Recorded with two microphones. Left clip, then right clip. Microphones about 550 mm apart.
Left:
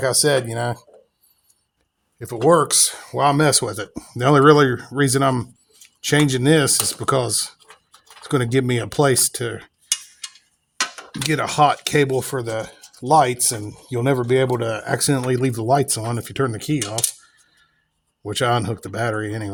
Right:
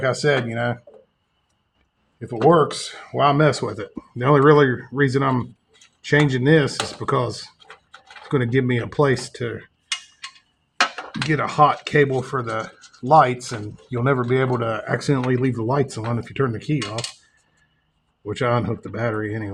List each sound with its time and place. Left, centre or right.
0.0 s speech: left
2.1 s speech: left
11.3 s speech: left
18.3 s speech: left